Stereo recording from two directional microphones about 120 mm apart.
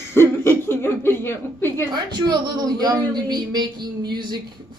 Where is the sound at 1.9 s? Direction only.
35° right (ahead or behind).